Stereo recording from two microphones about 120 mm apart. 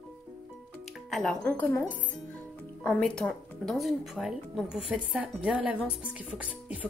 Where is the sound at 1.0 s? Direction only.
Centre (ahead or behind).